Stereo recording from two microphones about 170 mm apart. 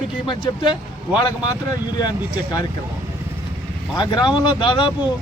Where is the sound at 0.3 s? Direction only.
30° left (ahead or behind).